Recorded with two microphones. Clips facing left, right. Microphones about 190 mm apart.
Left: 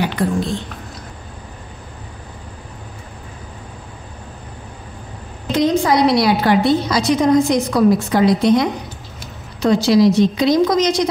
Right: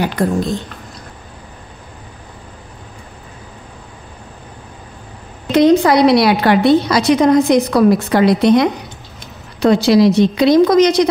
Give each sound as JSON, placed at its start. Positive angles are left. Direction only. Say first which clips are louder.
{"t": 0.0, "sound": "speech", "louder": "right 2 dB", "side_deg": -40}
{"t": 5.5, "sound": "a woman's voice", "louder": "right 5 dB", "side_deg": -65}